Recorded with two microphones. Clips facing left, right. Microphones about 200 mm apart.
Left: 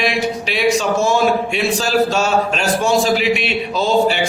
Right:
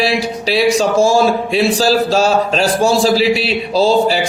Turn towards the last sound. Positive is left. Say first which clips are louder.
# right 3 dB
turn(degrees=-35)  # may be behind; listen again after turning